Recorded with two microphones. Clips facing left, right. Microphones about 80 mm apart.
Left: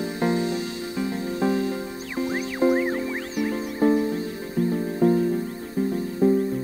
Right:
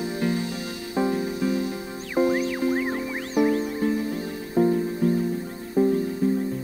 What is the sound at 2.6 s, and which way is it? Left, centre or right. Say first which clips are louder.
Music: left 7 dB; left.